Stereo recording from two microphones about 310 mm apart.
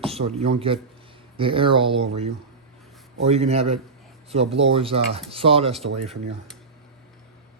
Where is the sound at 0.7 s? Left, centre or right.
Centre.